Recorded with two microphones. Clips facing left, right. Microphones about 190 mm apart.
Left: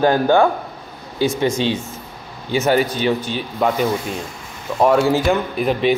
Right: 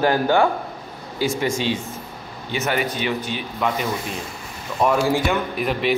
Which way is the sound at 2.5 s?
35° left (ahead or behind).